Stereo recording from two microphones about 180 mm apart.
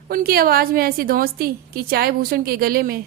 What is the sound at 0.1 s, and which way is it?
A woman's voice, 55° right (ahead or behind).